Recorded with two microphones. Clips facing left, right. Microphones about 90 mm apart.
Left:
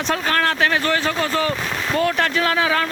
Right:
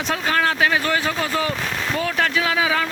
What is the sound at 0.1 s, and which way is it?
Speech, 5° right (ahead or behind).